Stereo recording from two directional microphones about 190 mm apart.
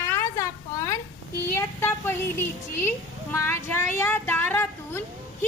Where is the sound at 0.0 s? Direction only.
15° left (ahead or behind).